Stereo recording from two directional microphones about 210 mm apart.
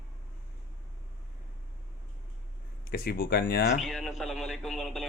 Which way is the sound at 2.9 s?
50° left (ahead or behind).